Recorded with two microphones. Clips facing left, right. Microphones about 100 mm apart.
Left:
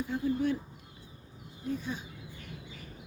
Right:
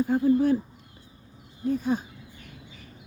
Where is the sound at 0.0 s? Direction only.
45° right (ahead or behind).